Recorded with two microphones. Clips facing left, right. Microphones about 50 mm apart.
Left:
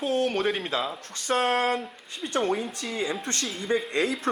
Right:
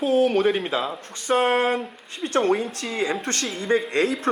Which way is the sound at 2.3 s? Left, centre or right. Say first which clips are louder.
Right 5 dB; right.